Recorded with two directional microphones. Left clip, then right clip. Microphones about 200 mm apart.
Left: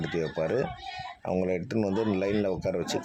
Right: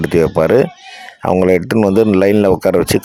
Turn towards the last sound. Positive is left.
turn(degrees=-50)  # may be behind; listen again after turning